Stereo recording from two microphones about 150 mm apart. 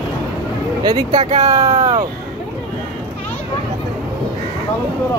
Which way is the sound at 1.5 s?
40° right (ahead or behind).